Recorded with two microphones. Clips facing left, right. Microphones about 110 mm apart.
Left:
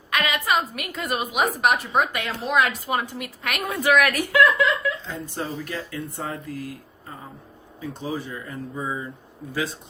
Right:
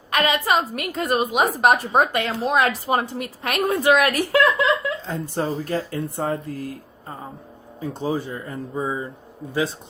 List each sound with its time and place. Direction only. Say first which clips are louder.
0.1 s a woman's voice: right 3 dB; 35° right (ahead or behind)
7.8 s a woman's voice: right 5 dB; 35° right (ahead or behind)